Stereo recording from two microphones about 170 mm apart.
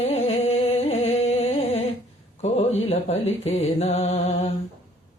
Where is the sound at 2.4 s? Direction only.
40° left (ahead or behind).